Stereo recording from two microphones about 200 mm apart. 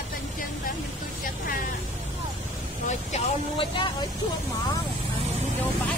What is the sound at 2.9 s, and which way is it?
Speech, 30° left (ahead or behind).